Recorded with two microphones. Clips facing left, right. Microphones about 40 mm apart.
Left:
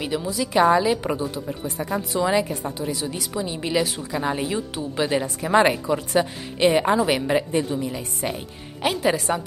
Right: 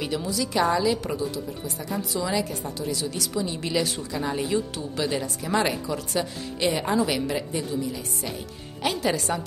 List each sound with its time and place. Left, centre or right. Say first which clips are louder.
0.0 s a woman's voice: left 2 dB; centre
4.1 s a woman's voice: even; left
8.9 s a woman's voice: left 4 dB; centre